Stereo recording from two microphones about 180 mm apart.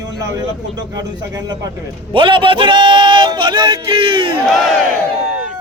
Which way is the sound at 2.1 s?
30° right (ahead or behind).